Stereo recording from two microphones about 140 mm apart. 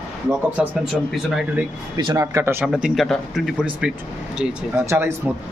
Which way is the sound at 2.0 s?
30° right (ahead or behind).